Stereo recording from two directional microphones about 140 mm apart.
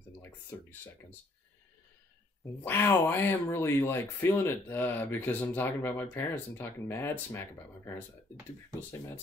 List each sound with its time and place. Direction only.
2.6 s speech: 15° left (ahead or behind)